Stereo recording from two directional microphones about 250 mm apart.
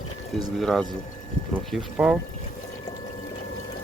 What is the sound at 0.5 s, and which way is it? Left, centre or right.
Speech, centre.